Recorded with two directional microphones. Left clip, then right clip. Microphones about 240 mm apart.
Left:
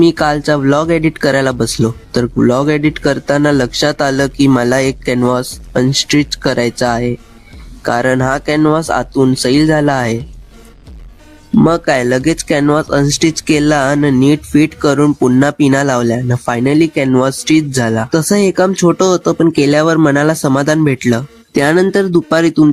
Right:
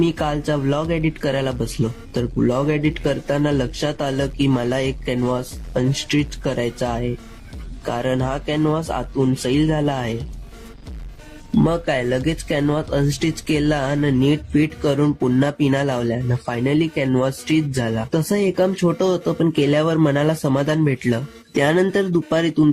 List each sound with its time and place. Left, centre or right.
0.0 s speech: left
11.6 s speech: left